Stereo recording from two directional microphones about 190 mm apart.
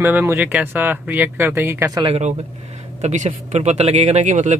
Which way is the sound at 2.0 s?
35° right (ahead or behind).